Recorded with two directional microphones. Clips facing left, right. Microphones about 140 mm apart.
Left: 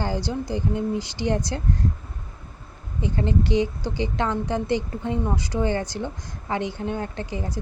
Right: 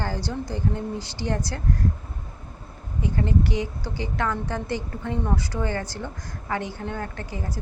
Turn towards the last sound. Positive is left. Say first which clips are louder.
# left 3 dB
turn(degrees=20)  # may be behind; listen again after turning